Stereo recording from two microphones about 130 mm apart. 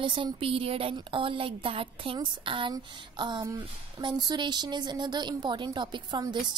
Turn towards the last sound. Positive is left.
turn(degrees=-35)  # may be behind; listen again after turning